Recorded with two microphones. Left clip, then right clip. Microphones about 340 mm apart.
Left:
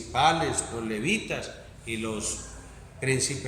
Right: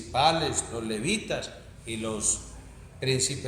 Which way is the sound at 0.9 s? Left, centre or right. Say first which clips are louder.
Left 1 dB; centre.